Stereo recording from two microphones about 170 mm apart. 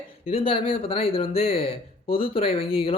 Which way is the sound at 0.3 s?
35° left (ahead or behind).